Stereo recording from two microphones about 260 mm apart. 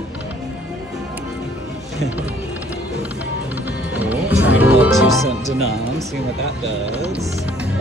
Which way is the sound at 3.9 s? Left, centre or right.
Centre.